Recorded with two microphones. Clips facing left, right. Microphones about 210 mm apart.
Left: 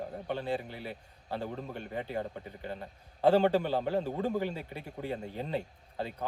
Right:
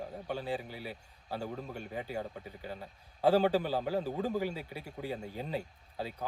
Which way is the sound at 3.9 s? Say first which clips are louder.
Left 2 dB; 15° left (ahead or behind).